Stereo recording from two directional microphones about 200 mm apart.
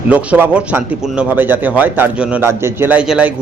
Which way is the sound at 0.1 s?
5° right (ahead or behind).